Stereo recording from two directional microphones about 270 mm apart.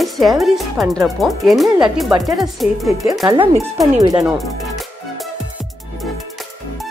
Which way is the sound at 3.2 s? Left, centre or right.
Centre.